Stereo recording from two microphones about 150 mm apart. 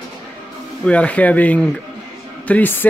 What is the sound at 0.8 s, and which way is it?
Speech, 10° left (ahead or behind).